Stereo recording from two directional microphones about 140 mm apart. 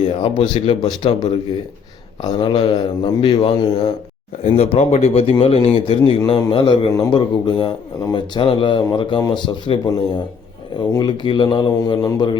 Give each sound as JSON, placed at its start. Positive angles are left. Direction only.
{"t": 0.0, "sound": "speech", "side_deg": 40}
{"t": 0.8, "sound": "speech", "side_deg": 30}
{"t": 4.4, "sound": "speech", "side_deg": 45}